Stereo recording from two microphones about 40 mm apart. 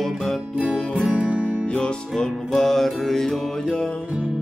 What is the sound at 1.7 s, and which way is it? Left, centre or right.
Music, left.